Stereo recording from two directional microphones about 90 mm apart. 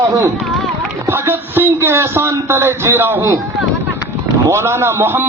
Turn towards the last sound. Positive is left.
turn(degrees=-25)  # may be behind; listen again after turning